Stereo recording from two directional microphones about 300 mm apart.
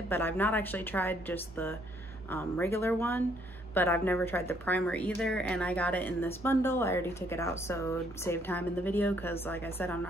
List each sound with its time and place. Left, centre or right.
0.1 s a woman's voice: centre